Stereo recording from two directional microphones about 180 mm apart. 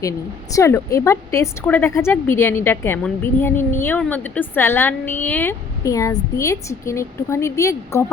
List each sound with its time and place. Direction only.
0.5 s a woman's voice: 15° left (ahead or behind)